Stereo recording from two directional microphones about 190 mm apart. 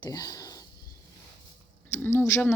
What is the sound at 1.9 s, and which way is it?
Speech, 15° left (ahead or behind).